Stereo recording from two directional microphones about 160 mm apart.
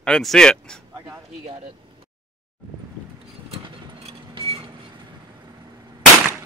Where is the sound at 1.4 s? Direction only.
40° right (ahead or behind).